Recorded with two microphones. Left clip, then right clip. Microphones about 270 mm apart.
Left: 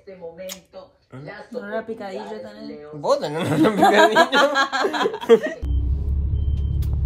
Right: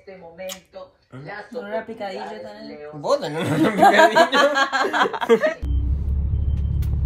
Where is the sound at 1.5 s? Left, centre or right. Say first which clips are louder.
Left 1 dB; centre.